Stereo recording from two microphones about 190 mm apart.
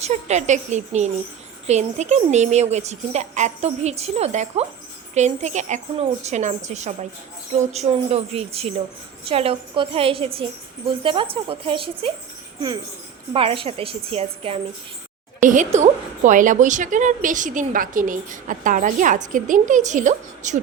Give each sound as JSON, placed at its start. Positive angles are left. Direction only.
{"t": 0.0, "sound": "a woman's voice", "side_deg": -35}
{"t": 13.3, "sound": "speech", "side_deg": -30}
{"t": 15.4, "sound": "a woman's voice", "side_deg": -40}